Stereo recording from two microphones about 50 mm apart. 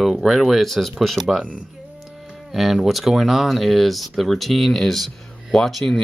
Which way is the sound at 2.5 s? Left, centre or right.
Centre.